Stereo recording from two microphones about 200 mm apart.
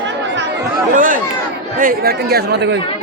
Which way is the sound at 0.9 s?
40° right (ahead or behind).